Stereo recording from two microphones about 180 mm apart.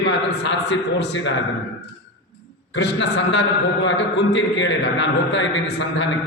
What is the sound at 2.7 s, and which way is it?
A man's voice, 75° left (ahead or behind).